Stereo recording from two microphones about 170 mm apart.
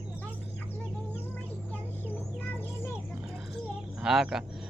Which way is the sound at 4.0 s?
5° right (ahead or behind).